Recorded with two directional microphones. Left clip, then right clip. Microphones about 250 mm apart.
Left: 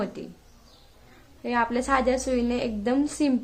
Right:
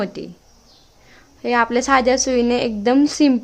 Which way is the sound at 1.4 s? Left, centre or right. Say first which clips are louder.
Right 8 dB; right.